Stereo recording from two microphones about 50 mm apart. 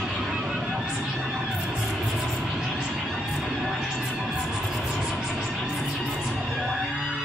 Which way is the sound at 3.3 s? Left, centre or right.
Centre.